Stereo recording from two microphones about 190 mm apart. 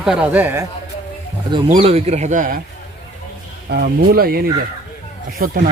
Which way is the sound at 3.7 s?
55° right (ahead or behind).